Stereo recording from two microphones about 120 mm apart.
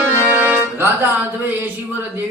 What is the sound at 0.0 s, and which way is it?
Accordion, 20° right (ahead or behind).